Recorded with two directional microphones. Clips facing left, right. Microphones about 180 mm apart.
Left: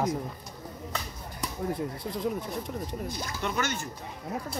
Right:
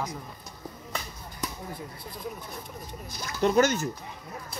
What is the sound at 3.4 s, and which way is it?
Speech, 40° right (ahead or behind).